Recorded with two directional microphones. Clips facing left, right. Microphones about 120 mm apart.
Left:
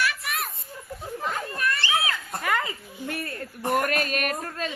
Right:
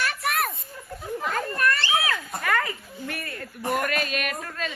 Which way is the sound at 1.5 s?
50° right (ahead or behind).